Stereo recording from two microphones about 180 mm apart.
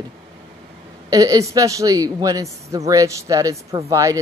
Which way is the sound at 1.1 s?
20° right (ahead or behind).